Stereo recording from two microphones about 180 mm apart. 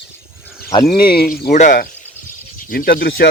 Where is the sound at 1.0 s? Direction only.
55° left (ahead or behind).